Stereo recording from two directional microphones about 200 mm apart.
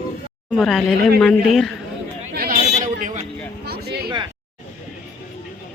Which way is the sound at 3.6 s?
50° right (ahead or behind).